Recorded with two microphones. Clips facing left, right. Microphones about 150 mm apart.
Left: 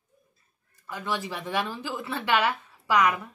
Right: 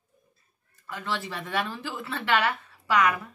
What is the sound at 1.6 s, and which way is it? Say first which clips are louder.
A woman's voice: left 1 dB; 5° left (ahead or behind).